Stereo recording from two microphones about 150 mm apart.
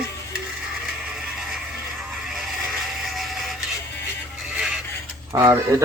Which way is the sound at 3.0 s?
Centre (ahead or behind).